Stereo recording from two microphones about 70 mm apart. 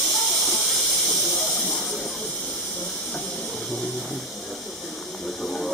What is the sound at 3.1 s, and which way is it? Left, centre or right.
Steam, centre.